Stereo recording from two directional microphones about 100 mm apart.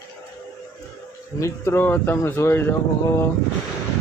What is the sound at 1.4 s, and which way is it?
Speech, 20° left (ahead or behind).